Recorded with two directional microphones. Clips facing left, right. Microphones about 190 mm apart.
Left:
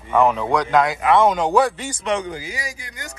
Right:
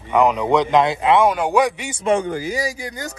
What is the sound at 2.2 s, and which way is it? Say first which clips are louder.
Speech: right 6 dB; 55° right (ahead or behind).